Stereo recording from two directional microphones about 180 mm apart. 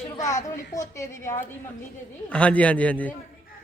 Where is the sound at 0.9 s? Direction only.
15° left (ahead or behind).